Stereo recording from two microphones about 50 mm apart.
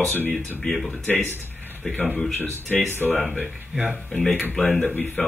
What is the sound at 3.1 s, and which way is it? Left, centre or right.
Speech, left.